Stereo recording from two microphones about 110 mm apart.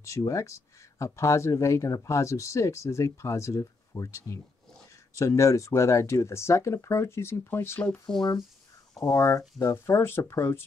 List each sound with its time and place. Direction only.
0.0 s speech: 30° left (ahead or behind)
8.2 s speech: 35° left (ahead or behind)